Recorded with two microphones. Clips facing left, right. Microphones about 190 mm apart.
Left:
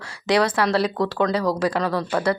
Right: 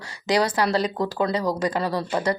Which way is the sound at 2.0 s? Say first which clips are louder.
Left 2 dB; 20° right (ahead or behind).